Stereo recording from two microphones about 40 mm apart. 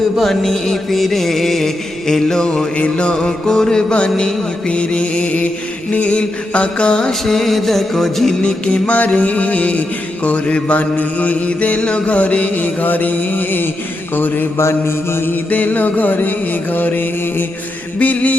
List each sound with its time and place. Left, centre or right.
0.2 s music: centre
2.7 s mantra: left
3.1 s music: centre
3.9 s music: left
5.9 s mantra: left
7.1 s music: centre
8.4 s music: left
9.0 s mantra: left
14.2 s music: left
14.7 s mantra: left
15.4 s music: left
18.0 s mantra: left